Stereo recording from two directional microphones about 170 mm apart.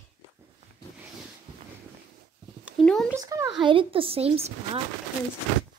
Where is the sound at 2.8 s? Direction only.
5° left (ahead or behind).